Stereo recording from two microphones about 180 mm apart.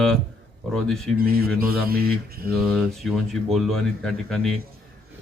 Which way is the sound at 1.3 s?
55° right (ahead or behind).